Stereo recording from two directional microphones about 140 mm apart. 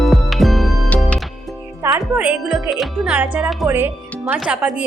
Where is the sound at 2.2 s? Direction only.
5° right (ahead or behind).